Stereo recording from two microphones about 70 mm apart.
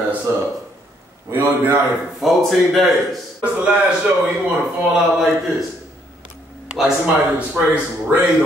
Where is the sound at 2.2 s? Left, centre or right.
Centre.